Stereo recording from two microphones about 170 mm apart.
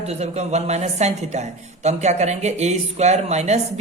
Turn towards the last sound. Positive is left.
turn(degrees=-40)  # may be behind; listen again after turning